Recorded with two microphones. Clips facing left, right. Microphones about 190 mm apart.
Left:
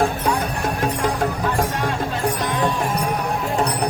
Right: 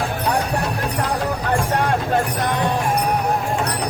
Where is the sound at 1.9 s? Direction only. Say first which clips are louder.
Right 3 dB; 50° right (ahead or behind).